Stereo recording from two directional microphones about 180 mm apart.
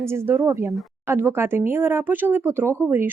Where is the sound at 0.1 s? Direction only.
15° right (ahead or behind).